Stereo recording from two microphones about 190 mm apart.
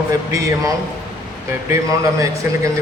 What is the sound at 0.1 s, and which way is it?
Speech, 15° right (ahead or behind).